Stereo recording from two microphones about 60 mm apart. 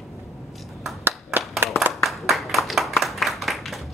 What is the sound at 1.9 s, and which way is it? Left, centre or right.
Clapping, centre.